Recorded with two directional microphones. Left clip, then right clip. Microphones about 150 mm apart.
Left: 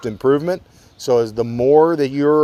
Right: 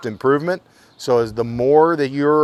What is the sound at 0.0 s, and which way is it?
Speech, 15° left (ahead or behind).